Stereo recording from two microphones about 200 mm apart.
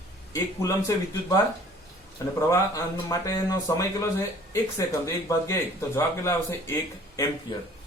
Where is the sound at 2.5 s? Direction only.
15° left (ahead or behind).